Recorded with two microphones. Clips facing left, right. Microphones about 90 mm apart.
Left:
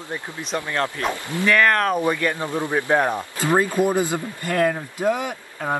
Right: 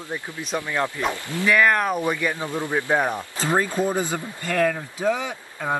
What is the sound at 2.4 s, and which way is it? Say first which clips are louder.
Speech: left 2 dB; 15° left (ahead or behind).